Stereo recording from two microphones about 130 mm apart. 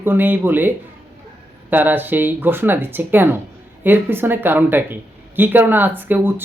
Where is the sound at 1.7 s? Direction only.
15° right (ahead or behind).